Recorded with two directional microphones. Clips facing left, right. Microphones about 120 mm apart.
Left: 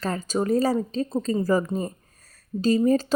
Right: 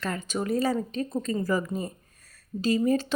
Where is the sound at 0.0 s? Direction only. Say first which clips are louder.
Left 5 dB; 35° left (ahead or behind).